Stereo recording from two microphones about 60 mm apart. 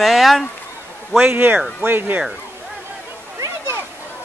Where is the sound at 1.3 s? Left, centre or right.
Right.